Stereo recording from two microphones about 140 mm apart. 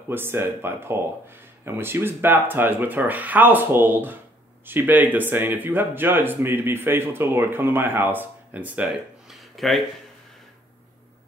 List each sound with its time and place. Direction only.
0.1 s speech: 15° right (ahead or behind); by 9.8 s centre (ahead or behind)